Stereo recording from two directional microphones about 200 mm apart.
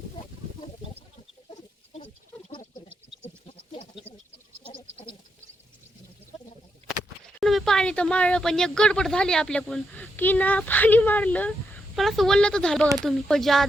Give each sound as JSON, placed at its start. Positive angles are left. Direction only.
{"t": 1.5, "sound": "chicken", "side_deg": 30}
{"t": 3.2, "sound": "goat", "side_deg": 25}
{"t": 6.8, "sound": "a sound", "side_deg": -30}
{"t": 7.3, "sound": "speech", "side_deg": 0}